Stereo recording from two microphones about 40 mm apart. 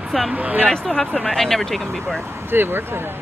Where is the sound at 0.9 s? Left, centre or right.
Left.